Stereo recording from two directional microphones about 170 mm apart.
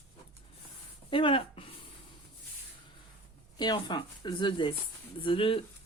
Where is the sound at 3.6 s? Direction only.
25° left (ahead or behind).